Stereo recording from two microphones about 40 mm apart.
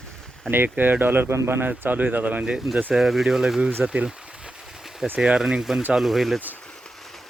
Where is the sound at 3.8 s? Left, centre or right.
Right.